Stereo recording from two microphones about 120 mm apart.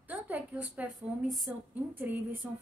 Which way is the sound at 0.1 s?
15° right (ahead or behind).